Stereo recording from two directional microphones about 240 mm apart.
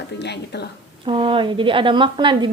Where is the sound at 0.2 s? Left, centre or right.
Left.